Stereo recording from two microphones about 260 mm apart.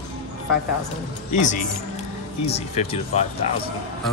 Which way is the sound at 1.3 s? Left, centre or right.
Left.